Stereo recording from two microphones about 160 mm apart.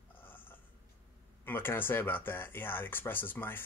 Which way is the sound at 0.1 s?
10° left (ahead or behind).